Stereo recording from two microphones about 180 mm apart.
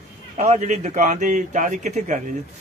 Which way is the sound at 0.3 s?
40° right (ahead or behind).